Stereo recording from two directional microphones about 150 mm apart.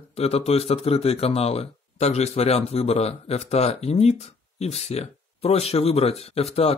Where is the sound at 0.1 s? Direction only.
45° left (ahead or behind).